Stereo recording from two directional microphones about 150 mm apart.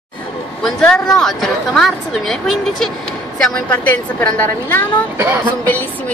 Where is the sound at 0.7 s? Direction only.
5° left (ahead or behind).